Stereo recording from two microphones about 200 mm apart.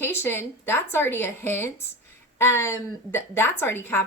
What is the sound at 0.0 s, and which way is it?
A woman's voice, 10° left (ahead or behind).